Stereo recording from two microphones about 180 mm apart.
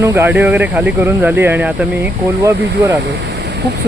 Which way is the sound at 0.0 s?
15° right (ahead or behind).